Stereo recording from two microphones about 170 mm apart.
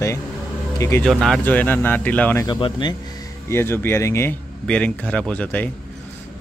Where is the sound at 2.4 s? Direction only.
25° left (ahead or behind).